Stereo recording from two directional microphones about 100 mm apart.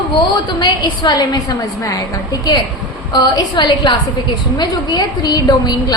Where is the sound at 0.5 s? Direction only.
45° left (ahead or behind).